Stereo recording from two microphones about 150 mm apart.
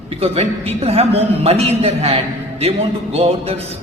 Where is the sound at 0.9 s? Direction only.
40° right (ahead or behind).